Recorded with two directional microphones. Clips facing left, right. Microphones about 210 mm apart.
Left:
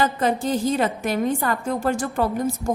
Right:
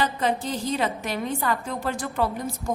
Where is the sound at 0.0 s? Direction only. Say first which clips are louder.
Left 4 dB; 45° left (ahead or behind).